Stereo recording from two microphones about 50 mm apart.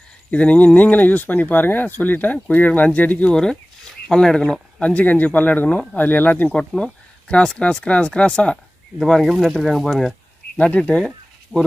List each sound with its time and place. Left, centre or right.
0.3 s speech: left
3.3 s speech: centre
4.5 s speech: left
6.5 s speech: centre
9.2 s speech: centre
10.6 s speech: left
11.5 s speech: centre